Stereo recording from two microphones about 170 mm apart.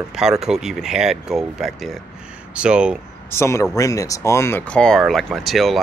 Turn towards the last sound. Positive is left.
turn(degrees=0)  # may be behind; listen again after turning